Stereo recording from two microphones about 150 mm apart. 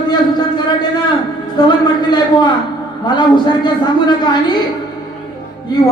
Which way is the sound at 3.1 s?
30° left (ahead or behind).